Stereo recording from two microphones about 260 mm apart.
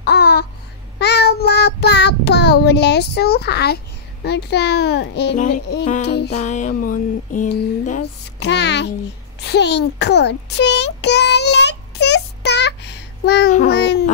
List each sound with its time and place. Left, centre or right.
0.0 s babbling: left
0.9 s child singing: left
6.0 s music: left
6.3 s a sound: left
8.5 s a child's voice: left
9.5 s a sound: left
13.7 s babbling: left